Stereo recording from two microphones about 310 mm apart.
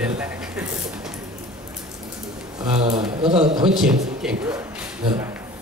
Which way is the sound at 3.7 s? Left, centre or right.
Centre.